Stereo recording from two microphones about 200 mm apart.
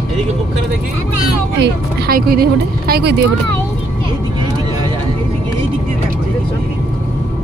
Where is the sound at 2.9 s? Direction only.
55° right (ahead or behind).